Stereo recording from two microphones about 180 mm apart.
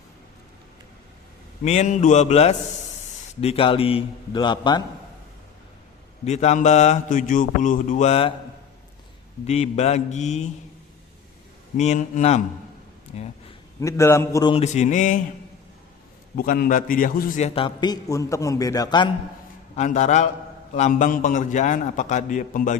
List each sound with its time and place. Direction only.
1.6 s mantra: 40° left (ahead or behind)
3.4 s a man's voice: 30° left (ahead or behind)
6.2 s mantra: 40° left (ahead or behind)
9.5 s mantra: 35° left (ahead or behind)
11.8 s mantra: 40° left (ahead or behind)
13.7 s a man's voice: 15° left (ahead or behind)
14.5 s mantra: 40° left (ahead or behind)
16.3 s a man's voice: 50° left (ahead or behind); by 19.1 s 25° left (ahead or behind)
19.7 s mantra: 40° left (ahead or behind)
20.7 s a man's voice: 40° left (ahead or behind)